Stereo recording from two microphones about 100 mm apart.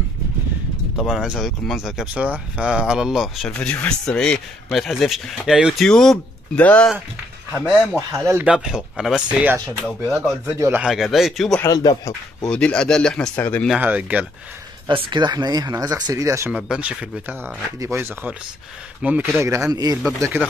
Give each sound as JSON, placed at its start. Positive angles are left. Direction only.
{"t": 0.9, "sound": "a man's voice", "side_deg": -5}
{"t": 3.5, "sound": "a man's voice", "side_deg": 15}
{"t": 5.9, "sound": "speech", "side_deg": 5}
{"t": 7.9, "sound": "speech", "side_deg": -25}
{"t": 8.5, "sound": "speech", "side_deg": 0}
{"t": 10.4, "sound": "speech", "side_deg": -30}
{"t": 10.8, "sound": "a man's voice", "side_deg": -5}
{"t": 11.6, "sound": "speech", "side_deg": 40}
{"t": 12.4, "sound": "speech", "side_deg": 10}
{"t": 13.7, "sound": "speech", "side_deg": -15}
{"t": 14.9, "sound": "speech", "side_deg": -55}
{"t": 16.5, "sound": "speech", "side_deg": -5}
{"t": 17.7, "sound": "speech", "side_deg": -25}
{"t": 19.7, "sound": "speech", "side_deg": -40}